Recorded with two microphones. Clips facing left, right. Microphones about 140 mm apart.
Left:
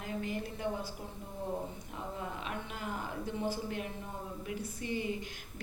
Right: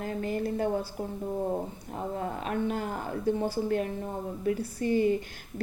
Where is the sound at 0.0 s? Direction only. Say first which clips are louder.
Right 7 dB; 45° right (ahead or behind).